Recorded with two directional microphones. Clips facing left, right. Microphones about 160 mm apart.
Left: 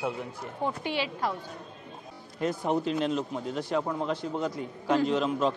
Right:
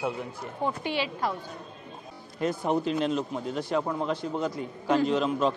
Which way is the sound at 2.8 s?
15° right (ahead or behind).